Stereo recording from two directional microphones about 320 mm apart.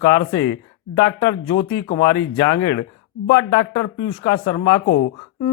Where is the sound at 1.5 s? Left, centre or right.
Left.